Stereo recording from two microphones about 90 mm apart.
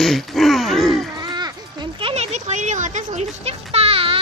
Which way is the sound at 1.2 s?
50° right (ahead or behind).